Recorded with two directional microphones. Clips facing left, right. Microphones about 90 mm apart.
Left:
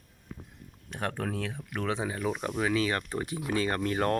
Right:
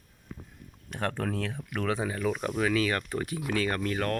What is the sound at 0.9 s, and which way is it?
Speech, 15° left (ahead or behind).